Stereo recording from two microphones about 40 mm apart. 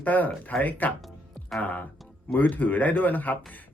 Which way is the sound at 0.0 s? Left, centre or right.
Left.